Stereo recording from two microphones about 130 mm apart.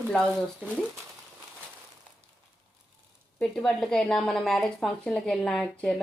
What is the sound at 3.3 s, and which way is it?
A woman's voice, 5° left (ahead or behind).